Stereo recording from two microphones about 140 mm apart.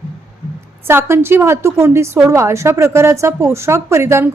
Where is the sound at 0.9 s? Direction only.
15° right (ahead or behind).